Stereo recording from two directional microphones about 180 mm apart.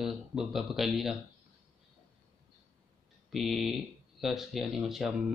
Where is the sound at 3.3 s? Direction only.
Centre (ahead or behind).